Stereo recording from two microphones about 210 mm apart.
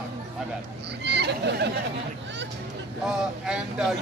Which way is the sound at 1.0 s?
55° right (ahead or behind).